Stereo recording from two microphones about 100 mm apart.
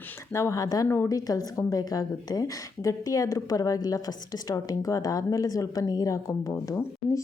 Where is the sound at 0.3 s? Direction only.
30° left (ahead or behind).